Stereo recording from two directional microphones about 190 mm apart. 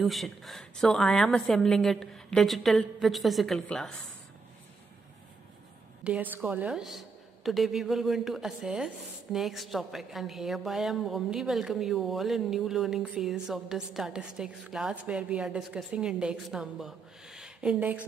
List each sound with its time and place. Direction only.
0.0 s a woman's voice: centre (ahead or behind)
6.0 s a woman's voice: 5° right (ahead or behind)